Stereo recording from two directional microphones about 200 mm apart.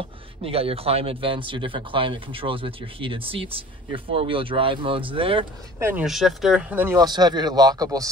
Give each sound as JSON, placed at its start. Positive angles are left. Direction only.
{"t": 0.4, "sound": "speech", "side_deg": -30}
{"t": 5.8, "sound": "speech", "side_deg": -10}